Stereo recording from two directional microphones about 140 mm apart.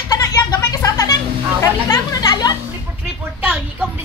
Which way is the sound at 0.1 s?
25° left (ahead or behind).